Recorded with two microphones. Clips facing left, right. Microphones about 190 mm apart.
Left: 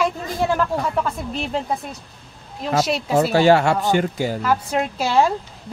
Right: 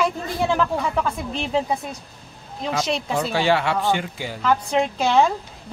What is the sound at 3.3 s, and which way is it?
Speech, 45° left (ahead or behind).